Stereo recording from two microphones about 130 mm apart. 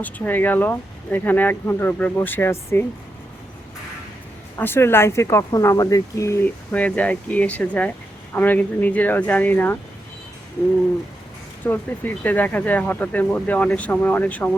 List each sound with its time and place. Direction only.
0.0 s speech: 15° left (ahead or behind)
4.5 s speech: 20° left (ahead or behind)
11.6 s speech: 15° left (ahead or behind)